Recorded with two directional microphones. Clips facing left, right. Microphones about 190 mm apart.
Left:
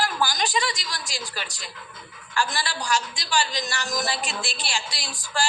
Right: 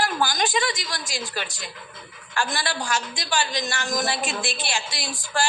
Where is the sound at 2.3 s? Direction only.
55° right (ahead or behind).